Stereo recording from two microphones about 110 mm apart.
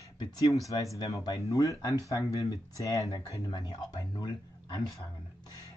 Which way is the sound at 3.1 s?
40° left (ahead or behind).